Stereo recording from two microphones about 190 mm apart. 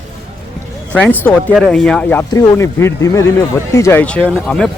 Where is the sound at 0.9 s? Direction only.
10° left (ahead or behind).